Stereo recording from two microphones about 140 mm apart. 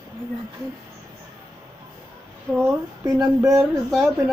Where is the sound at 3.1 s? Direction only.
25° right (ahead or behind).